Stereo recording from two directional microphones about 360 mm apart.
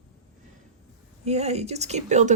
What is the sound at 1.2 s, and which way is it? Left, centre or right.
Speech, centre.